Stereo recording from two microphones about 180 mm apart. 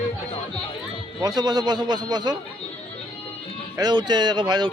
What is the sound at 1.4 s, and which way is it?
Speech, 20° right (ahead or behind).